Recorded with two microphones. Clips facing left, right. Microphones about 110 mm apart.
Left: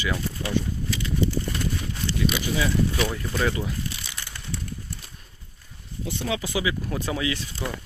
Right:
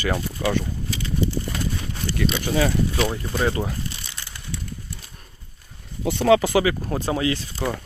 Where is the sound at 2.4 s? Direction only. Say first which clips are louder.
Right 4 dB; 50° right (ahead or behind).